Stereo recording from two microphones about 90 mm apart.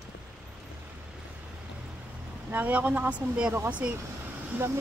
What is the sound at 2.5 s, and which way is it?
Speech, 20° right (ahead or behind).